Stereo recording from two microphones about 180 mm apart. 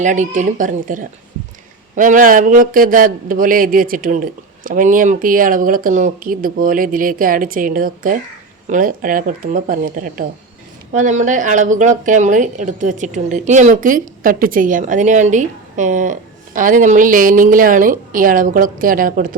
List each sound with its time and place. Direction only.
0.0 s speech: 45° right (ahead or behind)